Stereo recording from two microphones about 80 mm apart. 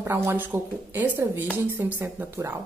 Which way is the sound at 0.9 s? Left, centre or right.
Right.